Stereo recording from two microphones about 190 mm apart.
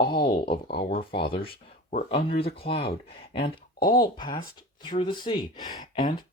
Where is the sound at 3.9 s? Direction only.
25° left (ahead or behind).